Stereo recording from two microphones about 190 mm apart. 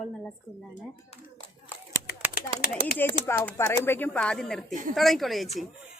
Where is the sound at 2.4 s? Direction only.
50° left (ahead or behind).